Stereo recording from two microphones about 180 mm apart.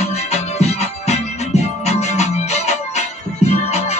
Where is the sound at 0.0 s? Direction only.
35° left (ahead or behind).